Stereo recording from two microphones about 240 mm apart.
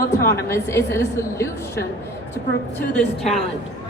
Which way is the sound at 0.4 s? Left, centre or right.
Centre.